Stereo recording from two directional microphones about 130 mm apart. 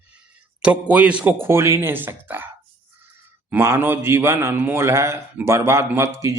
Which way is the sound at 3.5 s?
20° right (ahead or behind).